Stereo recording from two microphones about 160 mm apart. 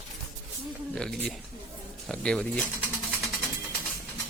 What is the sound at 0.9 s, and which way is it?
Speech, 5° left (ahead or behind).